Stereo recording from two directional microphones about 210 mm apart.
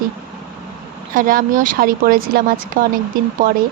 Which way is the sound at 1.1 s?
40° right (ahead or behind).